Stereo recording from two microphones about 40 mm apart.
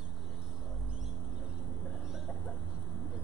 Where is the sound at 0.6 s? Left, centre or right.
Centre.